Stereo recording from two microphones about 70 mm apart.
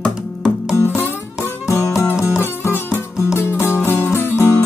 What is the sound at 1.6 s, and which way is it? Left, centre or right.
Music, left.